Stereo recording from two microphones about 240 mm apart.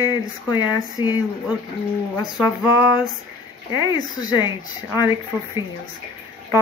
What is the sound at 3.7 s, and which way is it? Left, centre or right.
Speech, centre.